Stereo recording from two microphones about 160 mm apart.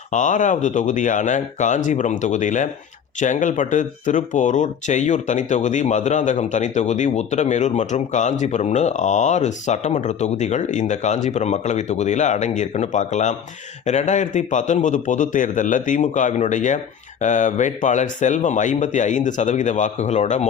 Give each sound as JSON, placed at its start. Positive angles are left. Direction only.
{"t": 0.1, "sound": "speech", "side_deg": 50}